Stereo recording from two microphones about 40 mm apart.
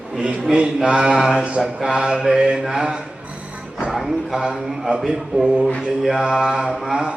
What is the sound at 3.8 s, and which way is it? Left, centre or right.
A man's voice, centre.